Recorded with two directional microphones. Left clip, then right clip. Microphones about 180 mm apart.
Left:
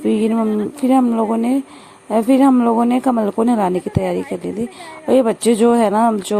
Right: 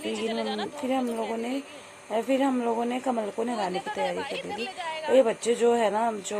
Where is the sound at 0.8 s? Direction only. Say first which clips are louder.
Left 14 dB; 40° left (ahead or behind).